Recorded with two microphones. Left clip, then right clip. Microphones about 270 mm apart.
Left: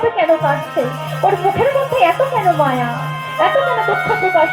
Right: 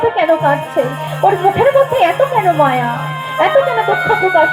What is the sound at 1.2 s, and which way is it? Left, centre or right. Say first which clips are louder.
Music: right 3 dB; right.